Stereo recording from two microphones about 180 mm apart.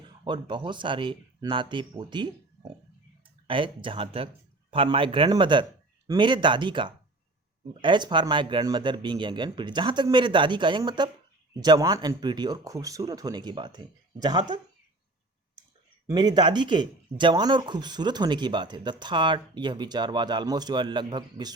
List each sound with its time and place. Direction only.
0.3 s speech: 25° right (ahead or behind)
3.4 s speech: 30° right (ahead or behind)
16.0 s speech: 25° right (ahead or behind)